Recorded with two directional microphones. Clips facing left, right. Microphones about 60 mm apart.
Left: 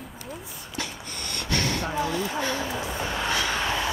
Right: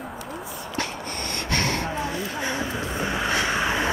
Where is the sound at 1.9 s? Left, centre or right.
Right.